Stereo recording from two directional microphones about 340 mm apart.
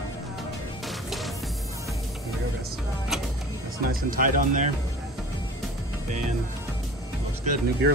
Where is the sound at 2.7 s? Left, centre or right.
Centre.